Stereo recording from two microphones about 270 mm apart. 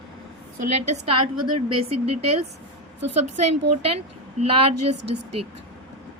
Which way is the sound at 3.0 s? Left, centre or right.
Right.